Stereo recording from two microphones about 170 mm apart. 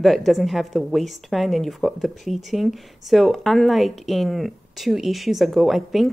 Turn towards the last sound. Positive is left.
turn(degrees=0)  # may be behind; listen again after turning